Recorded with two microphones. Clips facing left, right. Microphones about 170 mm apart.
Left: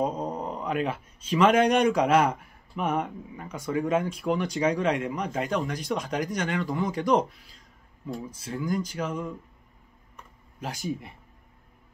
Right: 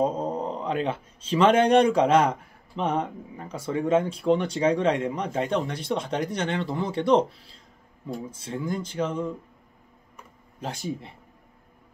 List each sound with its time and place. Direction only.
0.0 s speech: 30° right (ahead or behind)
10.6 s speech: 30° right (ahead or behind)